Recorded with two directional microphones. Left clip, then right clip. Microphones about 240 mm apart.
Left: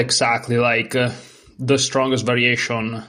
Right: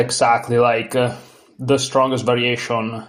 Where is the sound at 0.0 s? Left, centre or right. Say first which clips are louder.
Right 3 dB; left.